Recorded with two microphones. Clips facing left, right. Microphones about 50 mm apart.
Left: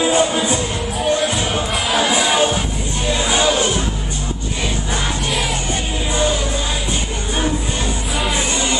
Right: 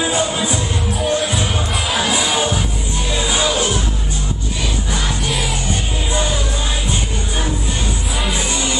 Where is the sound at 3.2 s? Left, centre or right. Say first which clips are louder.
Left 2 dB; centre.